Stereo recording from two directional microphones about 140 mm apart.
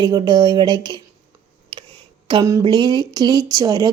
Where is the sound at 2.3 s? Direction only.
25° right (ahead or behind).